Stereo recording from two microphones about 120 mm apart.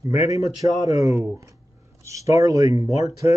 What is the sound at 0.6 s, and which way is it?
Speech, 50° left (ahead or behind).